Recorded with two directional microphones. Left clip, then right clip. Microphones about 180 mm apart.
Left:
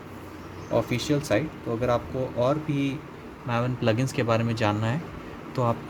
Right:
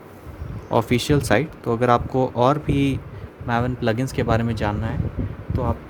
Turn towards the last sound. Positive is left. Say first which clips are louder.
# even
turn(degrees=-10)  # may be behind; listen again after turning